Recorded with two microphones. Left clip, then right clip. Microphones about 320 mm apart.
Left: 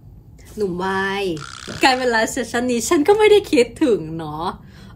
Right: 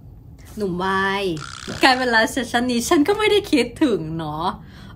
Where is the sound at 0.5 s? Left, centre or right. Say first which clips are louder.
Even; centre.